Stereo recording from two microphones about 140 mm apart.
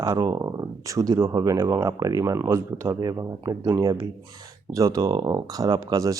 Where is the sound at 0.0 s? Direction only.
25° right (ahead or behind).